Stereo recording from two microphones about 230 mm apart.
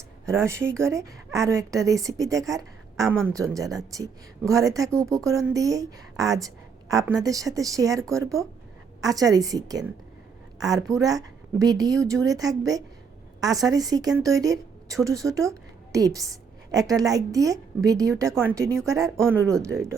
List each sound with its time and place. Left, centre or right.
0.3 s a woman's voice: centre